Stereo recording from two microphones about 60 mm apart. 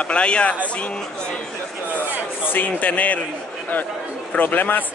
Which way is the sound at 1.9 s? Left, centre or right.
Left.